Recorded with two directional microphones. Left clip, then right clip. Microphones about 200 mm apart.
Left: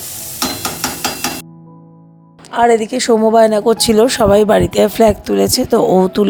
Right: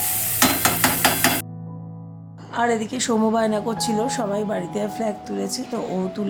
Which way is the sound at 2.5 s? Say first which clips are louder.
Left 10 dB; 25° left (ahead or behind).